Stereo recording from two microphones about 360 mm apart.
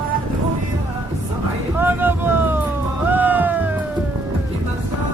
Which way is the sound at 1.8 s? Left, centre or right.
Centre.